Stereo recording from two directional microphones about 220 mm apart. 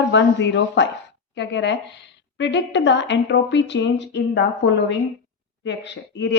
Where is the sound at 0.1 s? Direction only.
55° left (ahead or behind).